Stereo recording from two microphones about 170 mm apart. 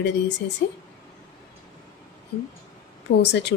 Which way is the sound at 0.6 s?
70° left (ahead or behind).